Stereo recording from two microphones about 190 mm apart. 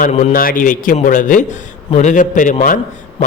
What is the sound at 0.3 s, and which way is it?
A man's voice, 45° left (ahead or behind).